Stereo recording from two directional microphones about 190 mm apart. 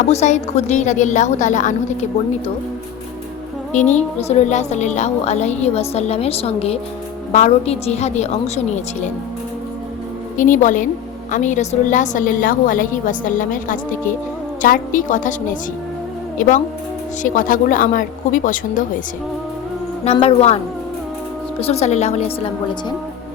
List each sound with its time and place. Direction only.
0.1 s a woman's voice: 35° left (ahead or behind)
3.7 s a woman's voice: 40° left (ahead or behind)
10.3 s a woman's voice: 45° left (ahead or behind)
17.2 s a woman's voice: 45° left (ahead or behind)
20.1 s a woman's voice: 35° left (ahead or behind)
21.6 s a woman's voice: 35° left (ahead or behind)